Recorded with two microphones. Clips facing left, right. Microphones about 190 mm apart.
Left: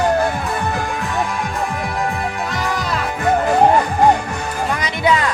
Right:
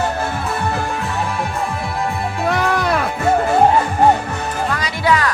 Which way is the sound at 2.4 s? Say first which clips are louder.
Right 5 dB; 60° right (ahead or behind).